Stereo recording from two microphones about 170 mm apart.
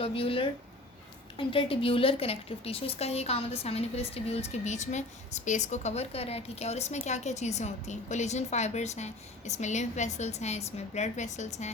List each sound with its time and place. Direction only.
0.0 s a woman's voice: 35° left (ahead or behind)